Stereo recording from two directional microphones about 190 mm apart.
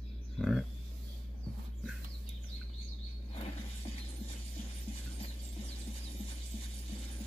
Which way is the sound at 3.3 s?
30° left (ahead or behind).